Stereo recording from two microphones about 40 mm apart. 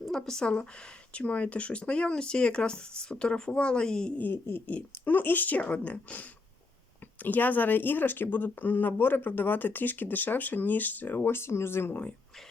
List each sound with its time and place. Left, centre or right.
0.0 s speech: centre
0.4 s speech: left
4.6 s speech: left
11.2 s speech: left